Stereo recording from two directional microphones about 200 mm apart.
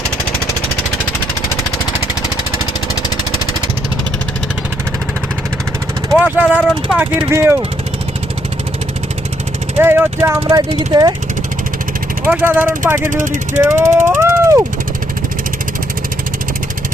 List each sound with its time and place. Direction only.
6.1 s speech: 5° right (ahead or behind)
9.7 s speech: 10° right (ahead or behind)
12.2 s speech: 10° right (ahead or behind)
13.2 s speech: 35° right (ahead or behind)
13.6 s vehicle: 15° right (ahead or behind)